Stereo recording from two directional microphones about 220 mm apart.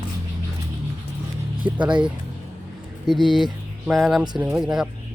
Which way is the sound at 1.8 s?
20° right (ahead or behind).